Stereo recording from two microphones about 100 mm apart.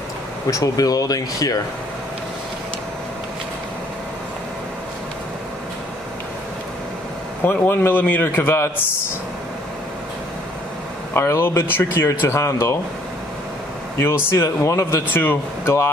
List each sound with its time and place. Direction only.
0.5 s speech: 35° left (ahead or behind)
7.4 s speech: 20° left (ahead or behind)
11.1 s speech: 25° left (ahead or behind)
13.9 s speech: 25° left (ahead or behind)
15.1 s speech: 25° left (ahead or behind)